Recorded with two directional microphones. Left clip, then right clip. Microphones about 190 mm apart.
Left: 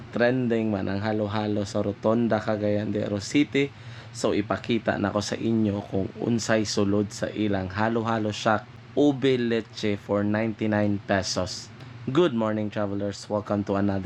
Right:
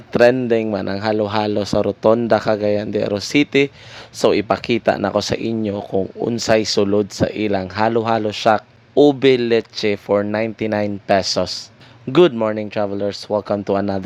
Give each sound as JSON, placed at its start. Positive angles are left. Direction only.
{"t": 0.1, "sound": "speech", "side_deg": -45}